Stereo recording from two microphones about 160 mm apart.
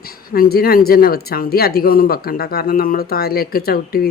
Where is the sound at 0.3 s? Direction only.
70° left (ahead or behind).